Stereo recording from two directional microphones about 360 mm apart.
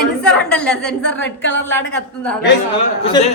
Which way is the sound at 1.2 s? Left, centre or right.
Left.